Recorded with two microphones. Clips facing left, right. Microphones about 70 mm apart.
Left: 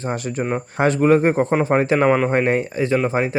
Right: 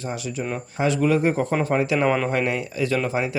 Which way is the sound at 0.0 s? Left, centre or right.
Left.